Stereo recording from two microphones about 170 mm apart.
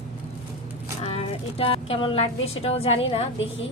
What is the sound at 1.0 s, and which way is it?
A woman's voice, 35° left (ahead or behind).